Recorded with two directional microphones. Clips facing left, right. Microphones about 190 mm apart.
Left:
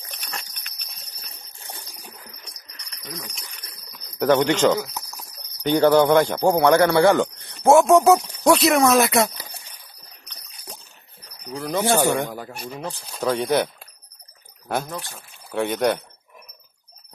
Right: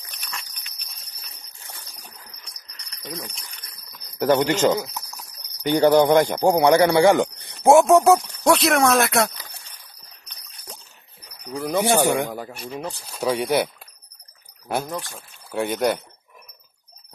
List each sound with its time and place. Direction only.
0.0 s horse: 35° left (ahead or behind)
1.6 s jingle bell: 25° left (ahead or behind)
3.0 s speech: 35° right (ahead or behind)
4.2 s speech: 5° right (ahead or behind)
7.8 s speech: centre (ahead or behind)
11.6 s speech: 15° right (ahead or behind)
14.9 s speech: 15° right (ahead or behind)
15.5 s speech: centre (ahead or behind)